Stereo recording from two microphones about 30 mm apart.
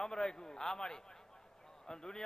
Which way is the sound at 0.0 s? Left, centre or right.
Left.